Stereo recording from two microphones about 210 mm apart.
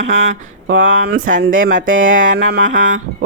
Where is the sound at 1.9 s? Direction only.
65° right (ahead or behind).